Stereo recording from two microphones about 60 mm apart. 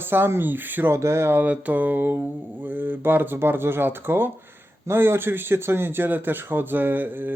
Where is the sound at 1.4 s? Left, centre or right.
Right.